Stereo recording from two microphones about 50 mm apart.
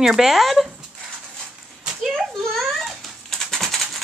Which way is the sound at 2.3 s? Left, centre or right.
Centre.